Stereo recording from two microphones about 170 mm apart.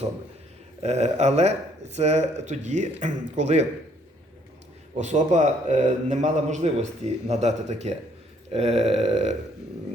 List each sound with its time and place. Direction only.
0.8 s speech: 40° right (ahead or behind)
4.9 s a man's voice: 45° right (ahead or behind)